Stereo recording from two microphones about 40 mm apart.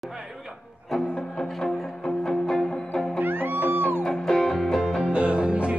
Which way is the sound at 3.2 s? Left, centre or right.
Right.